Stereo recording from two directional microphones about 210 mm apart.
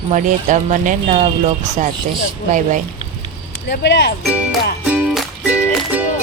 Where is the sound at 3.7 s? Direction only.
55° left (ahead or behind).